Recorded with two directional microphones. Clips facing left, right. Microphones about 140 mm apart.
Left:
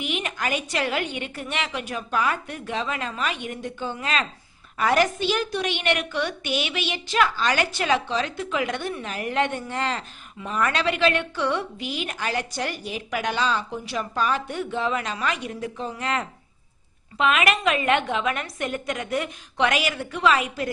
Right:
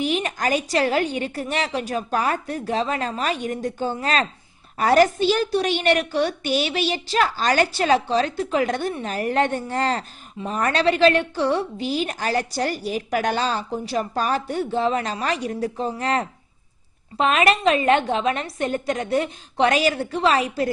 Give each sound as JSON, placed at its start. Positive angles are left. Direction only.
{"t": 0.0, "sound": "a woman's voice", "side_deg": -35}